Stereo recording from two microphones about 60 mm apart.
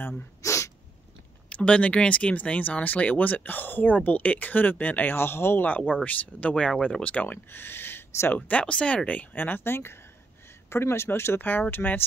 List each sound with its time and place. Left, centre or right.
0.4 s sneeze: left
1.5 s speech: left
5.6 s speech: left
7.5 s speech: left
8.4 s speech: left